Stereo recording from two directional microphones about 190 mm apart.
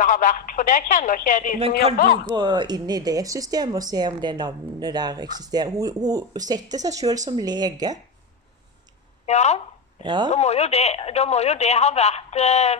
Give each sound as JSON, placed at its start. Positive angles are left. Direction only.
{"t": 0.0, "sound": "speech", "side_deg": 45}
{"t": 2.2, "sound": "a woman's voice", "side_deg": -25}
{"t": 9.2, "sound": "speech", "side_deg": 35}
{"t": 10.0, "sound": "a woman's voice", "side_deg": -20}
{"t": 10.3, "sound": "speech", "side_deg": 35}